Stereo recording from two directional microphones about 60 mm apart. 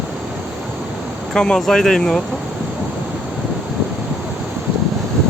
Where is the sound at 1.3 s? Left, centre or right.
Centre.